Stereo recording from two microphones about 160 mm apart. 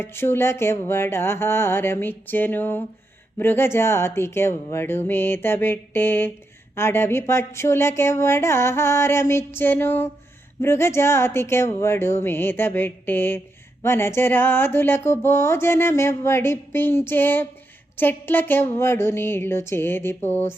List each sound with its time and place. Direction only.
0.0 s speech: 15° left (ahead or behind)